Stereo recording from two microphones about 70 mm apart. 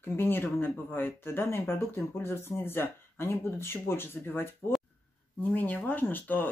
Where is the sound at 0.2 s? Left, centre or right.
Left.